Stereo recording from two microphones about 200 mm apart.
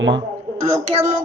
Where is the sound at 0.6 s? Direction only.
30° right (ahead or behind).